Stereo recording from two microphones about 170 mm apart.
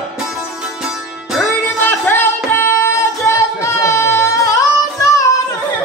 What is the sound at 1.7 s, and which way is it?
Music, 10° left (ahead or behind).